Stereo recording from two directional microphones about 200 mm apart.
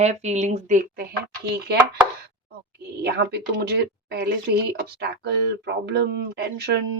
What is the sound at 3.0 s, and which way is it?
A woman's voice, 55° right (ahead or behind).